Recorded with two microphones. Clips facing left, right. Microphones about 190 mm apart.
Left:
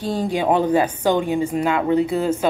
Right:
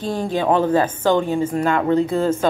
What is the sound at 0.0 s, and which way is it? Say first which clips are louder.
A woman's voice: even; 15° left (ahead or behind).